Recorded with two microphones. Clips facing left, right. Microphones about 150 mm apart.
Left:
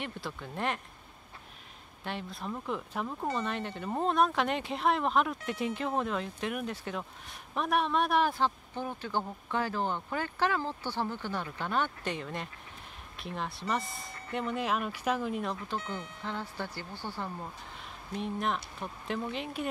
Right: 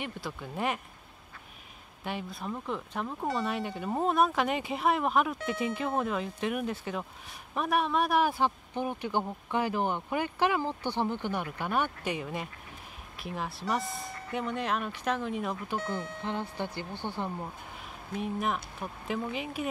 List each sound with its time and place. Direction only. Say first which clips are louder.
0.0 s speech: right 1 dB; 5° right (ahead or behind)
2.0 s a man's voice: right 2 dB; 5° right (ahead or behind)
16.2 s speech: right 3 dB; 20° right (ahead or behind)
18.2 s speech: right 1 dB; 5° right (ahead or behind)